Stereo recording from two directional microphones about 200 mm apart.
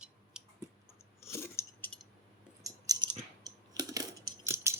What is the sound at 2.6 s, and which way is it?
Coin, 15° right (ahead or behind).